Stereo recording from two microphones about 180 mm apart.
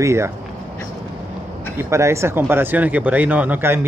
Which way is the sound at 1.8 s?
15° right (ahead or behind).